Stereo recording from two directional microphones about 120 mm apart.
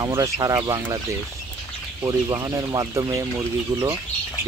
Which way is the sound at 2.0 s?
30° right (ahead or behind).